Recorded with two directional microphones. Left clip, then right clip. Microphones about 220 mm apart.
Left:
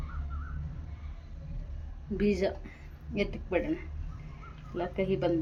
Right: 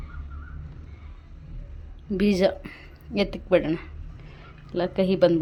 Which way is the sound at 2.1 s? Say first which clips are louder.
Right 7 dB; 40° right (ahead or behind).